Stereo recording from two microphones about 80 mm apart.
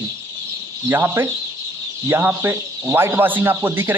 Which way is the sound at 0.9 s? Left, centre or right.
Right.